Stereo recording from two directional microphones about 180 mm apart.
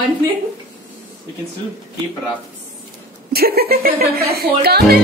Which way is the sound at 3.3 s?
60° right (ahead or behind).